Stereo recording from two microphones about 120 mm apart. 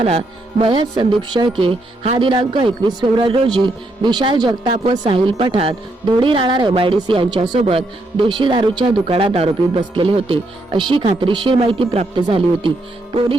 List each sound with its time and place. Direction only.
0.0 s music: 55° right (ahead or behind)
0.7 s speech: 40° right (ahead or behind)